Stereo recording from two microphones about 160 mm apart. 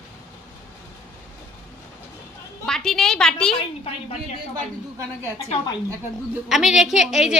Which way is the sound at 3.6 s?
40° left (ahead or behind).